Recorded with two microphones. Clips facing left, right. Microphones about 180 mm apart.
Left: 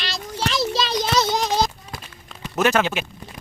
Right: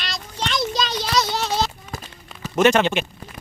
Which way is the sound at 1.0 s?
25° left (ahead or behind).